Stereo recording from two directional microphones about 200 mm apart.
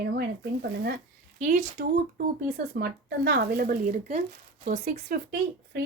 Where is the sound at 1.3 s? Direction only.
40° right (ahead or behind).